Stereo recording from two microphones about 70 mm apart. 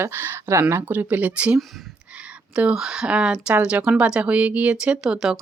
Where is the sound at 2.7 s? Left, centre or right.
Centre.